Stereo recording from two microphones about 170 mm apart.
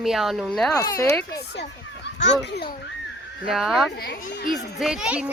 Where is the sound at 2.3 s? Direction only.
75° left (ahead or behind).